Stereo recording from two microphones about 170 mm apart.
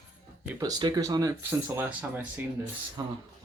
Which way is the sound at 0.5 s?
20° right (ahead or behind).